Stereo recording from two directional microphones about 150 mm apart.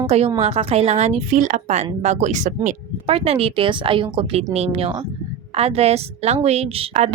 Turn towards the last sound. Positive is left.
turn(degrees=-45)  # may be behind; listen again after turning